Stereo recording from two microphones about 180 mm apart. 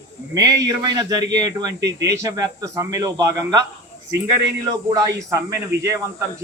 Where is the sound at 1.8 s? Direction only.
75° right (ahead or behind).